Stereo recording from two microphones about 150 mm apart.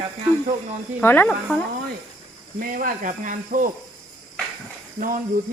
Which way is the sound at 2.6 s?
70° right (ahead or behind).